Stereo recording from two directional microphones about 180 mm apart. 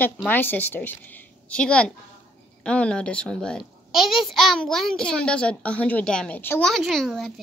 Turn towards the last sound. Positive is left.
turn(degrees=0)  # may be behind; listen again after turning